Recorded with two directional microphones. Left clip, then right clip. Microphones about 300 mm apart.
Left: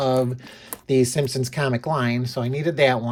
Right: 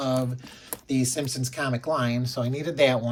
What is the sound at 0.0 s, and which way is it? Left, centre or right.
Speech, centre.